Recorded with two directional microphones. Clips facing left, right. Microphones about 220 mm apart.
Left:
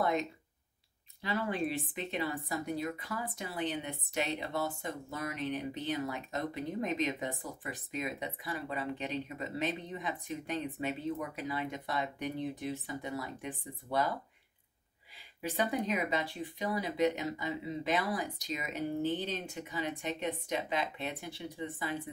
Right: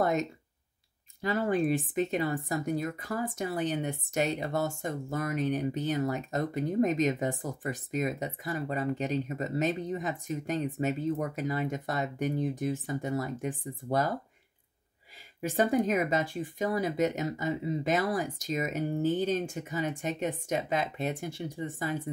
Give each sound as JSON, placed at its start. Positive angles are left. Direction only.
{"t": 0.0, "sound": "a sound", "side_deg": -45}
{"t": 1.2, "sound": "speech", "side_deg": -45}
{"t": 15.4, "sound": "speech", "side_deg": -45}